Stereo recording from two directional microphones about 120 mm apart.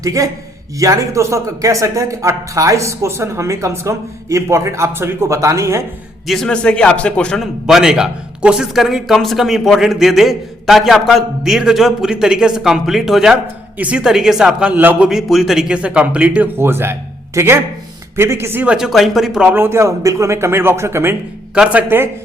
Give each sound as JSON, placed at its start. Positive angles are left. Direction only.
{"t": 0.0, "sound": "speech", "side_deg": -30}
{"t": 6.2, "sound": "a man's voice", "side_deg": 5}
{"t": 18.6, "sound": "speech", "side_deg": -5}